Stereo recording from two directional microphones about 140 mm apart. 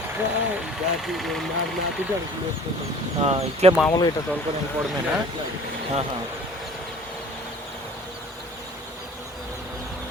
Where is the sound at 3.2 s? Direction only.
45° right (ahead or behind).